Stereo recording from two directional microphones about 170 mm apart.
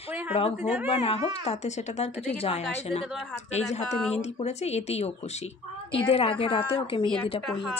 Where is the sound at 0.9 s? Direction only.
35° left (ahead or behind).